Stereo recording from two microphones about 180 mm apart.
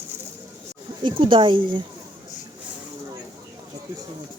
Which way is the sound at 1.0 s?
25° right (ahead or behind).